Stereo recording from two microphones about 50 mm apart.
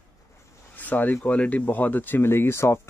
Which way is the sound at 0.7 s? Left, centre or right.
Left.